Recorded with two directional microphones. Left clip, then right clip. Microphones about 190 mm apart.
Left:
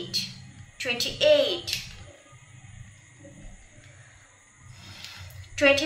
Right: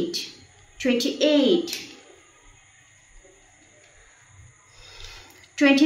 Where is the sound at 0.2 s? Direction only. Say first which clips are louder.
Left 2 dB; 5° left (ahead or behind).